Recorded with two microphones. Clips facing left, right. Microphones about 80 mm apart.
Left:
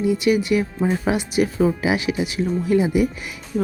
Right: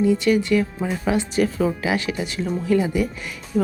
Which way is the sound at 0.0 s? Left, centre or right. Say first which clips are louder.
Right 1 dB; centre.